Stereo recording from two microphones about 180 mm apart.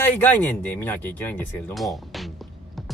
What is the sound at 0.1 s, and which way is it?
Speech, 10° left (ahead or behind).